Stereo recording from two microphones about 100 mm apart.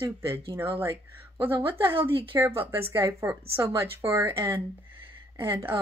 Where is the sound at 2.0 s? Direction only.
60° right (ahead or behind).